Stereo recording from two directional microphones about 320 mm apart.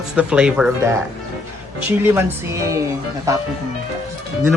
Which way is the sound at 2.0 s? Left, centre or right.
Centre.